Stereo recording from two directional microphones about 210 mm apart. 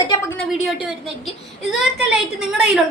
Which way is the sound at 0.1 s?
10° left (ahead or behind).